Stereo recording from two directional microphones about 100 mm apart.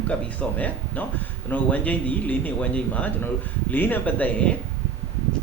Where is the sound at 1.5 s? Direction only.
15° left (ahead or behind).